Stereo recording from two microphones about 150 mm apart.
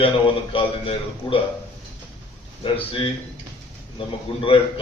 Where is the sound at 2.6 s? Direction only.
35° left (ahead or behind).